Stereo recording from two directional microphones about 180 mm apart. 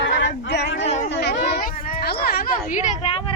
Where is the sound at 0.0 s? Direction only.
90° left; by 0.8 s 75° left (ahead or behind).